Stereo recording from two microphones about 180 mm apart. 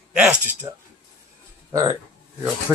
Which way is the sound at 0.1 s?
5° right (ahead or behind).